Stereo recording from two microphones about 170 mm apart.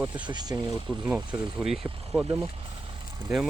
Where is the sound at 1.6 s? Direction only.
5° right (ahead or behind).